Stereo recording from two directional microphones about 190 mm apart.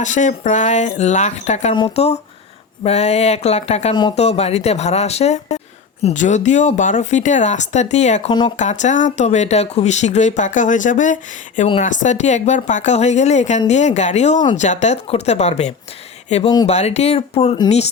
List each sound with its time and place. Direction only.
0.0 s speech: 40° left (ahead or behind)
8.3 s speech: 25° left (ahead or behind)
8.5 s speech: 40° left (ahead or behind)